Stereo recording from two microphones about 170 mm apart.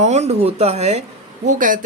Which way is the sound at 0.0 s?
40° right (ahead or behind).